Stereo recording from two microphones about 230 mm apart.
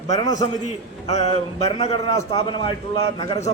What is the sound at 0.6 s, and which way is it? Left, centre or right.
A man's voice, left.